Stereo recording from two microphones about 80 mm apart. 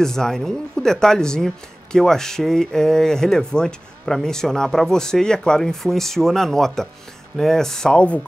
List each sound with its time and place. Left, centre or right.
0.0 s speech: centre